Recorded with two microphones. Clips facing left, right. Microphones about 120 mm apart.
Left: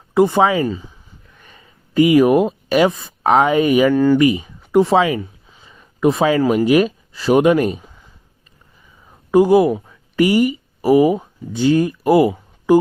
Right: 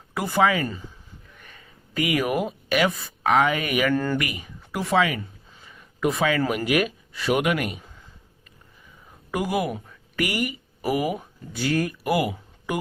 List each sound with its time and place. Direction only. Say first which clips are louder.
0.1 s speech: left 8 dB; 25° left (ahead or behind)
3.9 s speech: left 10 dB; 10° left (ahead or behind)
4.2 s a sound: left 16 dB; 25° left (ahead or behind)
6.7 s speech: left 9 dB; 30° left (ahead or behind)
9.3 s speech: left 14 dB; 30° left (ahead or behind)